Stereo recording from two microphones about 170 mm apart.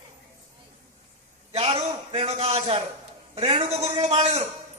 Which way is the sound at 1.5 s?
35° right (ahead or behind).